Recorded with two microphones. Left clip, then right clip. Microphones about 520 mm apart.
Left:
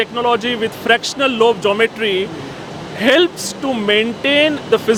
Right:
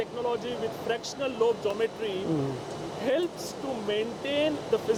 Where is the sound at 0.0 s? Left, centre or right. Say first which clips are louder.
Left 14 dB; left.